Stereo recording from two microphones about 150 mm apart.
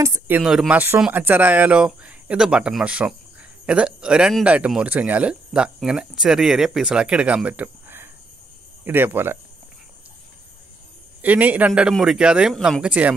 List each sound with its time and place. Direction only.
0.0 s speech: 20° right (ahead or behind)
0.4 s speech: 5° right (ahead or behind)
11.2 s speech: 10° right (ahead or behind)
12.8 s speech: 10° right (ahead or behind)